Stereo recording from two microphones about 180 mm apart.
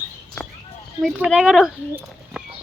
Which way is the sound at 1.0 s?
5° right (ahead or behind).